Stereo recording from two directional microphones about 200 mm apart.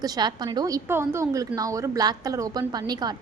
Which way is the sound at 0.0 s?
20° right (ahead or behind).